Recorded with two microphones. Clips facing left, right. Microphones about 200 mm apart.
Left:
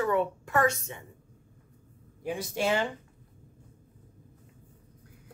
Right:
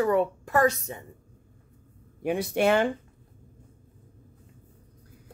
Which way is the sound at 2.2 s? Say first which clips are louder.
Right 6 dB; 65° right (ahead or behind).